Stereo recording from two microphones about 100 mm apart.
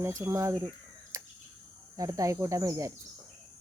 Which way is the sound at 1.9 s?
35° right (ahead or behind).